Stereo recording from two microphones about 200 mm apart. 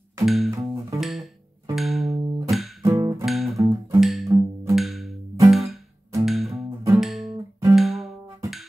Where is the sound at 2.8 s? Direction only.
20° right (ahead or behind).